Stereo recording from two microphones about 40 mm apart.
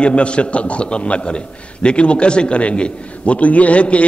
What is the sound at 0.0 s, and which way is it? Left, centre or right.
A man's voice, left.